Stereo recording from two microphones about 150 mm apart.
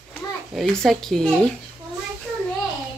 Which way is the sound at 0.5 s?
Centre (ahead or behind).